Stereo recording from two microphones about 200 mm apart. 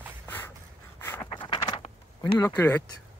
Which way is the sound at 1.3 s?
25° left (ahead or behind).